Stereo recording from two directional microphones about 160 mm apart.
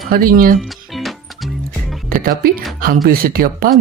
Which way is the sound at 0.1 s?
65° right (ahead or behind).